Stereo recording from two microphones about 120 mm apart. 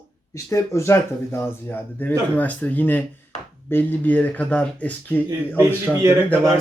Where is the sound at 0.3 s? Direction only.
25° left (ahead or behind).